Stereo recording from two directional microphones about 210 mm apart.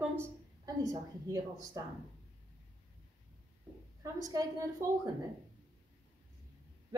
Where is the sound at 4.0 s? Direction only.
15° right (ahead or behind).